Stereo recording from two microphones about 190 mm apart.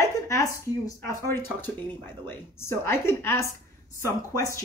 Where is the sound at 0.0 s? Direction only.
15° left (ahead or behind).